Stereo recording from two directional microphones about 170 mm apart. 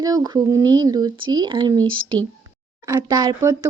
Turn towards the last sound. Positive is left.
turn(degrees=-20)  # may be behind; listen again after turning